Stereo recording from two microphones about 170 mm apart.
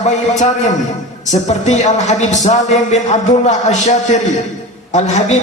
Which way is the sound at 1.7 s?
45° left (ahead or behind).